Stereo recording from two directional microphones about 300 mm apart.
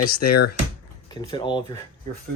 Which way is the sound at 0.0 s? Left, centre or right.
Left.